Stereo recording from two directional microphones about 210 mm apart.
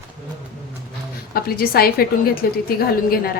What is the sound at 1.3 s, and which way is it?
A woman's voice, 45° left (ahead or behind).